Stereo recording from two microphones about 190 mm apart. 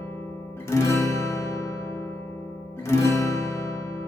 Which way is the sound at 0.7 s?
15° left (ahead or behind).